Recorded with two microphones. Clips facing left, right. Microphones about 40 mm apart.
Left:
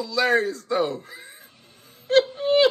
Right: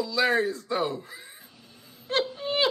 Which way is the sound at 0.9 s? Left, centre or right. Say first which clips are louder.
Left 2 dB; left.